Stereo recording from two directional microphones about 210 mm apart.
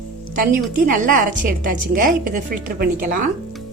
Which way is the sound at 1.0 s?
40° right (ahead or behind).